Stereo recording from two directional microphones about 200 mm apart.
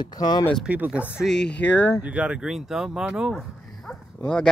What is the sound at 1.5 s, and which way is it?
Speech, 10° left (ahead or behind).